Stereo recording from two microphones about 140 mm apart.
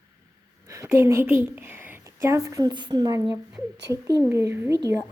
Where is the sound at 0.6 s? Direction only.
20° right (ahead or behind).